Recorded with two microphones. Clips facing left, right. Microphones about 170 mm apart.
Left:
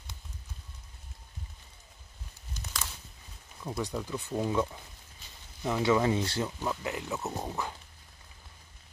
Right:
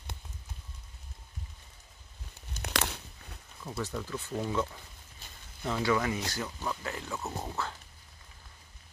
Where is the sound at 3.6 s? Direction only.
15° left (ahead or behind).